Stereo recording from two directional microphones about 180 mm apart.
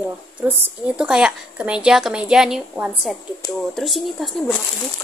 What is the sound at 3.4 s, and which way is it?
Speech, 20° left (ahead or behind).